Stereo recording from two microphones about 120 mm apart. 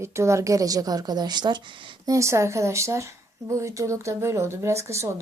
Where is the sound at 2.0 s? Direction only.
25° right (ahead or behind).